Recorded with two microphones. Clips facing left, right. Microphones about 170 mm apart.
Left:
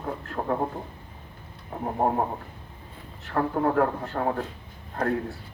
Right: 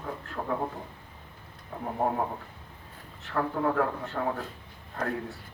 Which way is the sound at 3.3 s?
45° left (ahead or behind).